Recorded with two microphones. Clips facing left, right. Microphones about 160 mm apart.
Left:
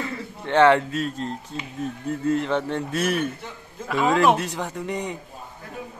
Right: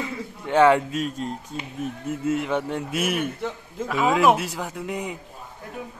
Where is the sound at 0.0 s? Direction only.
10° right (ahead or behind).